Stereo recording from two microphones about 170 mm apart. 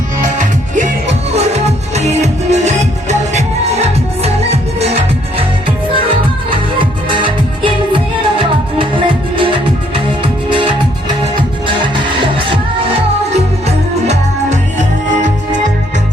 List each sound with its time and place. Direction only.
1.4 s music: 40° right (ahead or behind)
6.5 s music: 30° right (ahead or behind)
13.7 s music: 40° right (ahead or behind)